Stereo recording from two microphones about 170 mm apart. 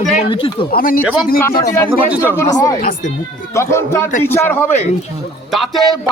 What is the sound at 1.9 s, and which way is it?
Speech, 10° right (ahead or behind).